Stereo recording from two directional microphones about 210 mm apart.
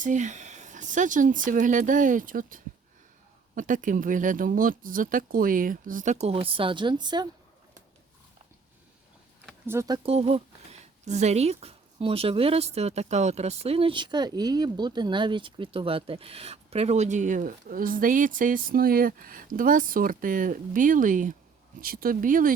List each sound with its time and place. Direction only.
0.0 s speech: 35° right (ahead or behind); by 7.3 s 20° right (ahead or behind)
9.6 s speech: 15° right (ahead or behind); by 22.5 s 40° right (ahead or behind)